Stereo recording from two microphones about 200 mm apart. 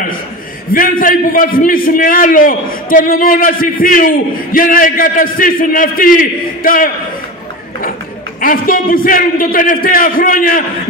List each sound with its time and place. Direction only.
0.7 s a man's voice: 45° left (ahead or behind)
8.4 s a man's voice: 45° left (ahead or behind)